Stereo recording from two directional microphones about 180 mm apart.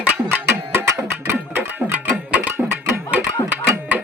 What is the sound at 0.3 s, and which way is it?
Music, 15° right (ahead or behind).